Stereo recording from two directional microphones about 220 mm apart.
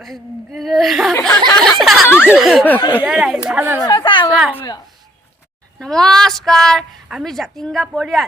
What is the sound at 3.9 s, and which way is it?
Speech, 20° left (ahead or behind).